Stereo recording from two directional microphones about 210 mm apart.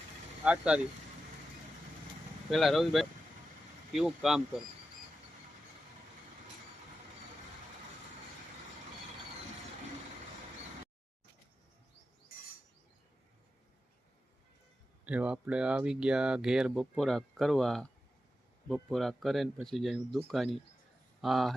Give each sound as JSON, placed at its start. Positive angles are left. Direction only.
{"t": 0.4, "sound": "speech", "side_deg": -5}
{"t": 2.5, "sound": "speech", "side_deg": 0}
{"t": 15.0, "sound": "speech", "side_deg": -5}